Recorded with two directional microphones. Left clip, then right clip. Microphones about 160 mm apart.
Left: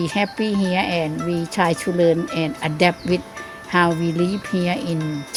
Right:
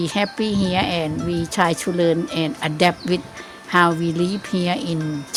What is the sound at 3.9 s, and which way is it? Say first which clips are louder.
Speech: even; 25° left (ahead or behind).